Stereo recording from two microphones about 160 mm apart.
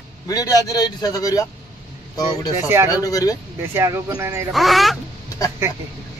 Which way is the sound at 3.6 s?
15° right (ahead or behind).